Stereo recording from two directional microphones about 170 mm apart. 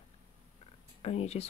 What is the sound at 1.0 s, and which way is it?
Speech, 35° left (ahead or behind).